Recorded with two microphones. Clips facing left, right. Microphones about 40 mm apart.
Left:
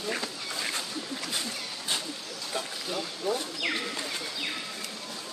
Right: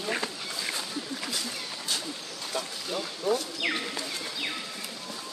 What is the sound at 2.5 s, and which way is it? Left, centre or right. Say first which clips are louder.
Speech: right 1 dB; centre.